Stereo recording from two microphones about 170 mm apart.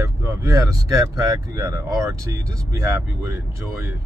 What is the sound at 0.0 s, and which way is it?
Speech, 15° right (ahead or behind).